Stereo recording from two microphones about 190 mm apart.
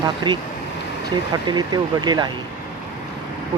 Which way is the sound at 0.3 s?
25° right (ahead or behind).